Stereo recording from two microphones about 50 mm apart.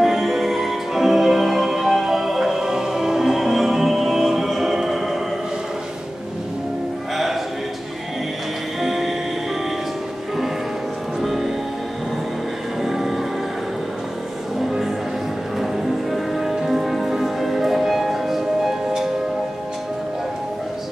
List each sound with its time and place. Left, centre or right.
0.0 s music: centre
8.8 s music: centre
11.1 s music: centre
12.8 s music: centre
14.6 s music: centre